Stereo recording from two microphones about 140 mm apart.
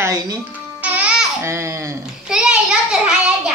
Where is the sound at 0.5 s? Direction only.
10° right (ahead or behind).